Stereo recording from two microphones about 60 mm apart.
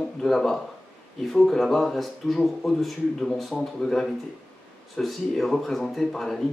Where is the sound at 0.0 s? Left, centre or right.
Centre.